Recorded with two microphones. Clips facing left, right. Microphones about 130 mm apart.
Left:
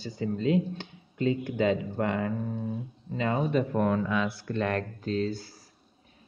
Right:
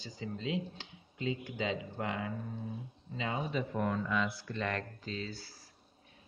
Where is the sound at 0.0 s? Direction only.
55° left (ahead or behind).